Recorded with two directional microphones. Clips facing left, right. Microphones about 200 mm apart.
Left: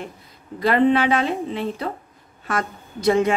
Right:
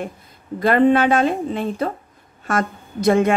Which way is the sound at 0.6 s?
50° right (ahead or behind).